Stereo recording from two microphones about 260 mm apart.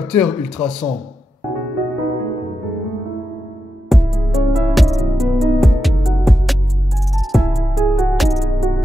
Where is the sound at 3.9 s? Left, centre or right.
Centre.